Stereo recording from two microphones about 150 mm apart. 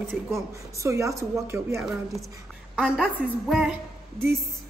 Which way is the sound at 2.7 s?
5° right (ahead or behind).